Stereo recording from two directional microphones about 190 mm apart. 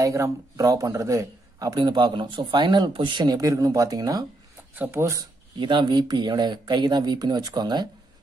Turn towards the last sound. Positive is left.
turn(degrees=-20)  # may be behind; listen again after turning